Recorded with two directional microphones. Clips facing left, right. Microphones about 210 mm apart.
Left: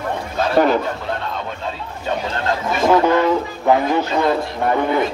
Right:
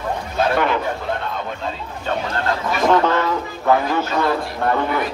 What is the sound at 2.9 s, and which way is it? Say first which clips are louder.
Speech: left 4 dB; 15° left (ahead or behind).